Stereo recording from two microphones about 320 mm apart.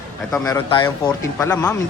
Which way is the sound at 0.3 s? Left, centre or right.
Centre.